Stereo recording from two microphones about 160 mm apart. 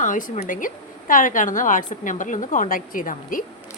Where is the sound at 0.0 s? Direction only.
55° left (ahead or behind).